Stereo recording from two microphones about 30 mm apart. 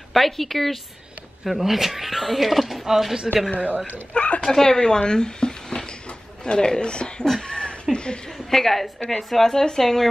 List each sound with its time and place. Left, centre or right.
0.1 s speech: centre
1.4 s speech: centre
3.5 s speech: right
4.1 s a sound: left
4.4 s speech: centre
5.0 s a sound: left
6.4 s speech: left
7.4 s a sound: left
8.5 s speech: centre